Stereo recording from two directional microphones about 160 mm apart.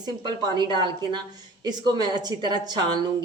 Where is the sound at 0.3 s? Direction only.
30° right (ahead or behind).